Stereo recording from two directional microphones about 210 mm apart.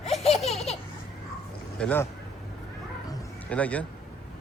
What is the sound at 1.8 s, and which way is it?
Speech, 10° left (ahead or behind).